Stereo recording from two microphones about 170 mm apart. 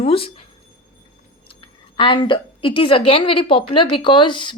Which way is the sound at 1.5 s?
30° left (ahead or behind).